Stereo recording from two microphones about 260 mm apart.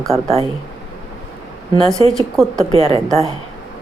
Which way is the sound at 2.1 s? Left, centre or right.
Centre.